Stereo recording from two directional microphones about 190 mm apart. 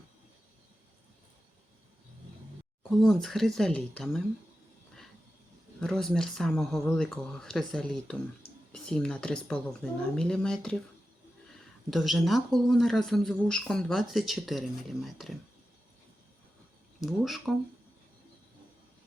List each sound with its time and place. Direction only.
2.9 s speech: centre (ahead or behind)
5.8 s speech: 5° left (ahead or behind)
11.9 s speech: centre (ahead or behind)
17.0 s speech: centre (ahead or behind)